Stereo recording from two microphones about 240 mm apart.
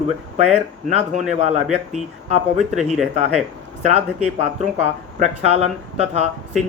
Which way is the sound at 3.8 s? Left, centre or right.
Right.